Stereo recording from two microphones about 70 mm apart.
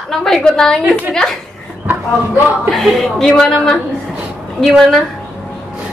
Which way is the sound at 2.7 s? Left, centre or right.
Centre.